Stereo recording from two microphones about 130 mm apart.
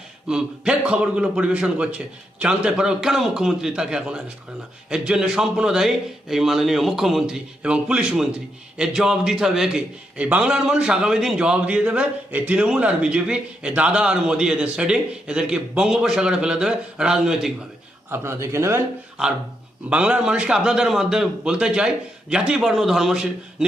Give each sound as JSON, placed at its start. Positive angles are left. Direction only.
{"t": 0.3, "sound": "a man's voice", "side_deg": -5}
{"t": 18.1, "sound": "a man's voice", "side_deg": -20}
{"t": 19.9, "sound": "a man's voice", "side_deg": -10}